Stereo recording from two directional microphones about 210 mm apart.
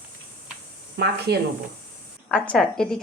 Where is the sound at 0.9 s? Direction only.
50° right (ahead or behind).